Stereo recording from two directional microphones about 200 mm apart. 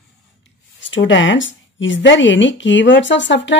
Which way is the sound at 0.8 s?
70° left (ahead or behind).